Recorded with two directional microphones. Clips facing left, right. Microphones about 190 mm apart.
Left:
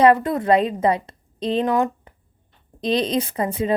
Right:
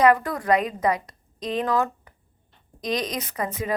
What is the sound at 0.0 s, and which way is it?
Speech, 25° left (ahead or behind).